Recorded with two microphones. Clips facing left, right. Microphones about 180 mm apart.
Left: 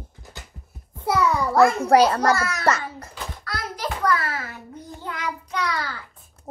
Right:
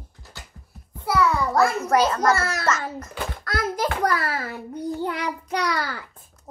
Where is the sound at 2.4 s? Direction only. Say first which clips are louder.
Right 1 dB; 30° right (ahead or behind).